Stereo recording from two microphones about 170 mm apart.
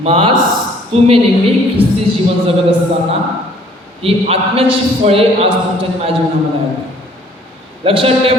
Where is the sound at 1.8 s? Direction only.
35° right (ahead or behind).